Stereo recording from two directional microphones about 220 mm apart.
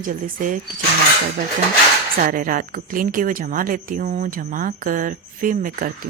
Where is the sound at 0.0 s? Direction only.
35° right (ahead or behind).